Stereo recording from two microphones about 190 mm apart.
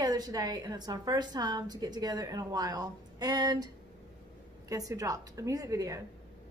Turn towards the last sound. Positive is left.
turn(degrees=-20)  # may be behind; listen again after turning